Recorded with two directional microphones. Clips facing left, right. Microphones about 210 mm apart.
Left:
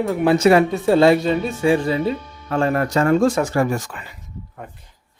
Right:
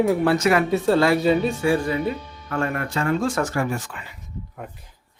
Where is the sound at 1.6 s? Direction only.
20° left (ahead or behind); by 3.9 s 40° left (ahead or behind).